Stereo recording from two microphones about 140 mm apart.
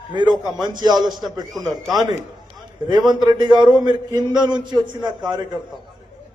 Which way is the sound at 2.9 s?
30° right (ahead or behind).